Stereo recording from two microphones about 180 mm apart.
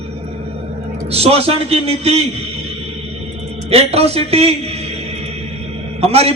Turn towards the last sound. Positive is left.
turn(degrees=-35)  # may be behind; listen again after turning